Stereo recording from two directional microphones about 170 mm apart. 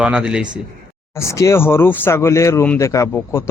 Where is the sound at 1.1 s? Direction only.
15° left (ahead or behind).